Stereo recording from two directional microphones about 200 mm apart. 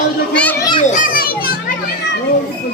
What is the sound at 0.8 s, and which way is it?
Speech, 40° left (ahead or behind).